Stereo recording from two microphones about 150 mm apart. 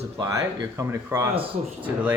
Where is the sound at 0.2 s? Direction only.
20° right (ahead or behind).